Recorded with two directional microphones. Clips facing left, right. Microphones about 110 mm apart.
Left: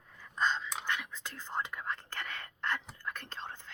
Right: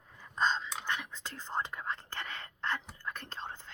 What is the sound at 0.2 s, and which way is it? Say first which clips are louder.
Dog: right 1 dB; 20° right (ahead or behind).